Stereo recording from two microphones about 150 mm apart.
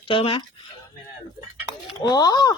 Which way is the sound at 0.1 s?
35° left (ahead or behind).